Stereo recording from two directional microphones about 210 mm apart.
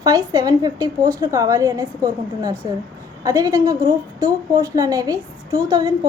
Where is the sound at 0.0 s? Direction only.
15° right (ahead or behind).